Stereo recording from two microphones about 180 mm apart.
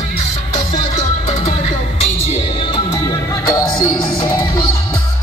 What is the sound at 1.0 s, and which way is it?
Music, 40° left (ahead or behind).